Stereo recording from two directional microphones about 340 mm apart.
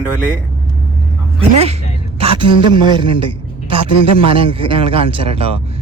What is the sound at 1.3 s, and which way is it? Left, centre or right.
A man's voice, centre.